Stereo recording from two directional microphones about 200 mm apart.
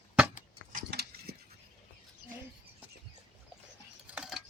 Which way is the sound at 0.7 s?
50° right (ahead or behind).